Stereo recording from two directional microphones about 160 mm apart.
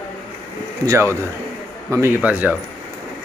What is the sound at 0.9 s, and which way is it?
A man's voice, 20° right (ahead or behind).